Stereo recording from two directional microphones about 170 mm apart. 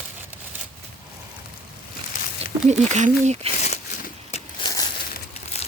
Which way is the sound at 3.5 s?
45° left (ahead or behind).